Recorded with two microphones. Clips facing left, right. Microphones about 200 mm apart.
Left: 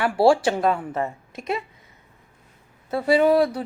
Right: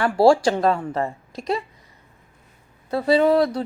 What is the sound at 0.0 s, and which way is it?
Speech, 5° left (ahead or behind).